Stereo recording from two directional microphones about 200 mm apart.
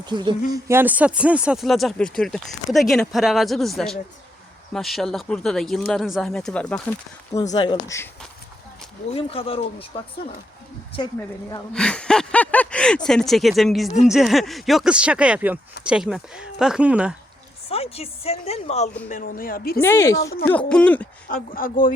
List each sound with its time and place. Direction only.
0.0 s speech: 20° right (ahead or behind)
0.7 s speech: 10° right (ahead or behind)
7.5 s speech: 20° left (ahead or behind)
9.0 s speech: 30° left (ahead or behind)
11.7 s speech: 5° left (ahead or behind)
17.7 s speech: 30° left (ahead or behind)
19.0 s a woman's voice: 40° left (ahead or behind)
19.8 s speech: 15° left (ahead or behind)
21.2 s a woman's voice: 45° left (ahead or behind)